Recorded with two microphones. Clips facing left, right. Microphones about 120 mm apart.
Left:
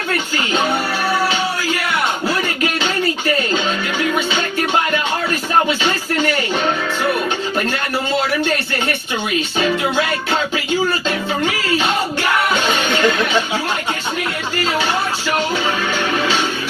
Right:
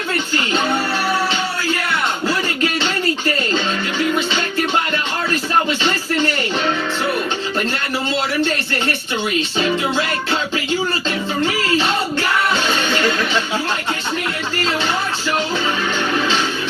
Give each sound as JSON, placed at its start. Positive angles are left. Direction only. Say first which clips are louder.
{"t": 12.6, "sound": "music", "louder": "left 2 dB", "side_deg": 20}